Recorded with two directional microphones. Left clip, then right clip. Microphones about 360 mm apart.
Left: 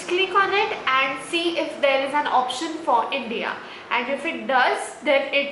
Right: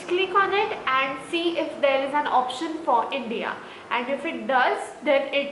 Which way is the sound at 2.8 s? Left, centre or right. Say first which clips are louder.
Left 2 dB; centre.